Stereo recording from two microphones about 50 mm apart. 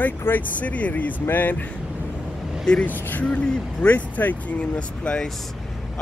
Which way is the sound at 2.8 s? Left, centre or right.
Left.